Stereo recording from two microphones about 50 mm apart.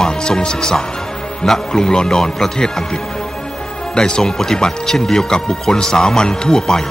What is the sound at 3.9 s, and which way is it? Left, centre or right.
Speech, centre.